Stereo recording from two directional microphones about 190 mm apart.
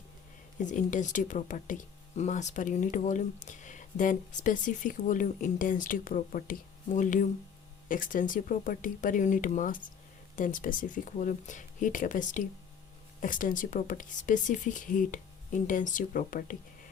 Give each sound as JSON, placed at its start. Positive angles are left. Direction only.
{"t": 0.6, "sound": "speech", "side_deg": 40}